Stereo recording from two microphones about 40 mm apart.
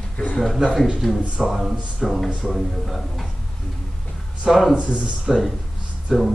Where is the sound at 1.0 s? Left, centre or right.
Centre.